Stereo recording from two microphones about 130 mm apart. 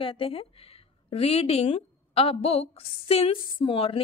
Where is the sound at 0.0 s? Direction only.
45° left (ahead or behind).